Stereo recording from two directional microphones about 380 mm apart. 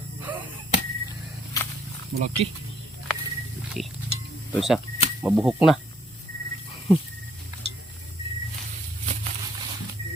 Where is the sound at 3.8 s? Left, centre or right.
Centre.